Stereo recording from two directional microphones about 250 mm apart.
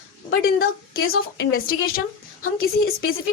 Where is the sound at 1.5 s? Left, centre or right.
Left.